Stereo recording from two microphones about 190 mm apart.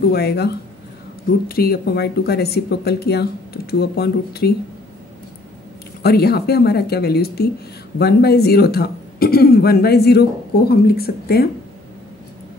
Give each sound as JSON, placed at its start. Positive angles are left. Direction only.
{"t": 0.1, "sound": "speech", "side_deg": 60}
{"t": 1.5, "sound": "speech", "side_deg": 55}
{"t": 6.0, "sound": "speech", "side_deg": 55}